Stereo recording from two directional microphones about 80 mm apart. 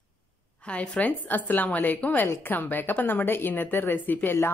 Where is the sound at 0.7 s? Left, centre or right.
Centre.